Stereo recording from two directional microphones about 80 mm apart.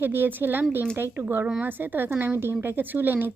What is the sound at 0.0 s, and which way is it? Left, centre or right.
A woman's voice, right.